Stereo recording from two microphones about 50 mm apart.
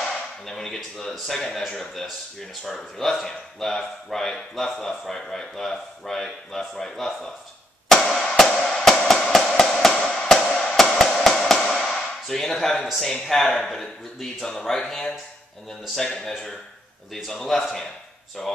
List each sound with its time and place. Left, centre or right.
0.0 s a sound: centre
0.7 s speech: centre
8.0 s music: centre
13.0 s speech: centre
16.3 s speech: centre